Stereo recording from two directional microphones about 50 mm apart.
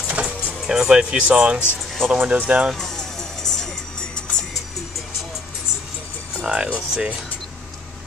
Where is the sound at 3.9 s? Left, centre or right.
Left.